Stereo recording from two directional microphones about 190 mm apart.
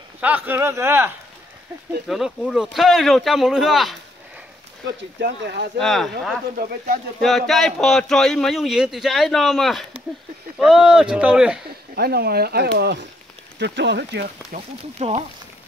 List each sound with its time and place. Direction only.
0.2 s speech: 10° right (ahead or behind)
2.0 s a man's voice: centre (ahead or behind)
4.8 s speech: 60° right (ahead or behind)
5.8 s a man's voice: centre (ahead or behind)
6.5 s speech: 50° right (ahead or behind)
7.2 s a man's voice: centre (ahead or behind)
11.9 s speech: 55° right (ahead or behind)
14.2 s speech: 35° right (ahead or behind)